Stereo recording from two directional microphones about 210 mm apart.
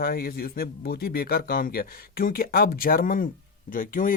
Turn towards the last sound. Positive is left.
turn(degrees=40)  # may be behind; listen again after turning